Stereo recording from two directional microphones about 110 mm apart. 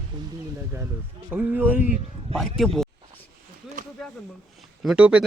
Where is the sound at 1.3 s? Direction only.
15° right (ahead or behind).